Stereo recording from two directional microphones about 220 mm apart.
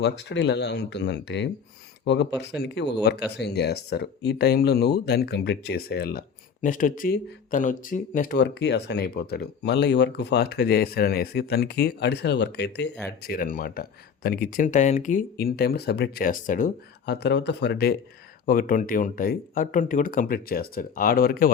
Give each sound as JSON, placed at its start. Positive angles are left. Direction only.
{"t": 0.0, "sound": "speech", "side_deg": 50}